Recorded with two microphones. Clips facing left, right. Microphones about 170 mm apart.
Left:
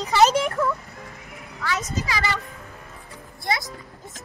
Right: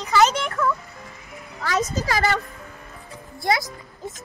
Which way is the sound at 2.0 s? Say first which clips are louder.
Right 5 dB; 50° right (ahead or behind).